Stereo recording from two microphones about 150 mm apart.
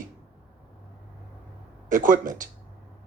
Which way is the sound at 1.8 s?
60° right (ahead or behind).